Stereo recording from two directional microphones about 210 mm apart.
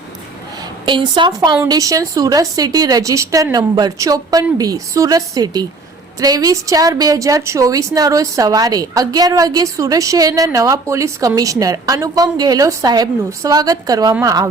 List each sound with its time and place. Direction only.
0.9 s a woman's voice: 20° right (ahead or behind)